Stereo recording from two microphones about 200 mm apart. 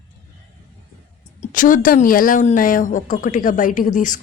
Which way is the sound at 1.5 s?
40° left (ahead or behind).